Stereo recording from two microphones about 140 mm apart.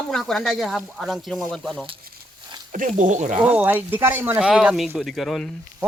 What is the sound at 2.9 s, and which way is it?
Speech, 60° right (ahead or behind).